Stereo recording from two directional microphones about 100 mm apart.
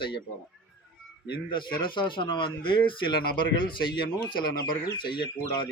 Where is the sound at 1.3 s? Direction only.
50° left (ahead or behind).